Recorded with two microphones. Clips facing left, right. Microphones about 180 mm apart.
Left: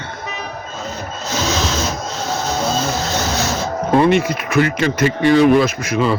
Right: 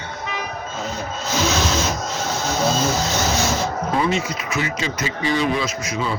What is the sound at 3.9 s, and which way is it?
Speech, 60° left (ahead or behind).